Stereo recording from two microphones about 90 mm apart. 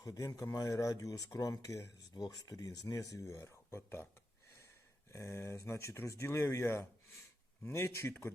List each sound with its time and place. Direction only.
0.0 s speech: 40° left (ahead or behind)
2.1 s speech: 45° left (ahead or behind); by 4.1 s 25° left (ahead or behind)
5.1 s speech: 30° left (ahead or behind)